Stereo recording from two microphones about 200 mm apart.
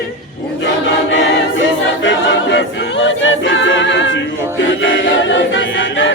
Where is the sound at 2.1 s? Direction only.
65° left (ahead or behind).